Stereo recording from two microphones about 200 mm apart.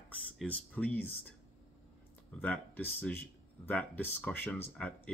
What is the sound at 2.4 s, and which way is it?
Speech, 10° left (ahead or behind).